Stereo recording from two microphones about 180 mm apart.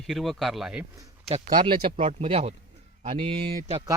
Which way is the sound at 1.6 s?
30° right (ahead or behind).